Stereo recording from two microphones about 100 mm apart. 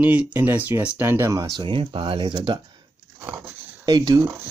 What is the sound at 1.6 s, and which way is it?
Speech, 60° right (ahead or behind).